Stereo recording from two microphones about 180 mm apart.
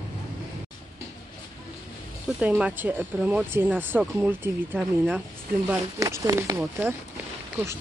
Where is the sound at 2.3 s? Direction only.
5° right (ahead or behind).